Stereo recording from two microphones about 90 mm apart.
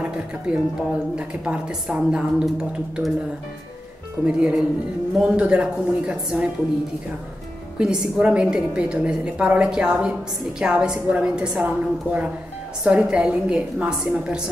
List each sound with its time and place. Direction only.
0.5 s a woman's voice: 10° right (ahead or behind)
4.3 s a woman's voice: 10° right (ahead or behind)
7.8 s a woman's voice: 10° right (ahead or behind)